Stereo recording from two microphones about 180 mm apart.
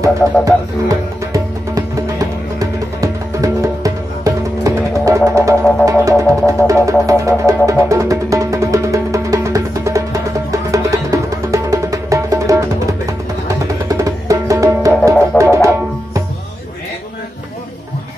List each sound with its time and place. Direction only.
0.0 s music: 20° right (ahead or behind)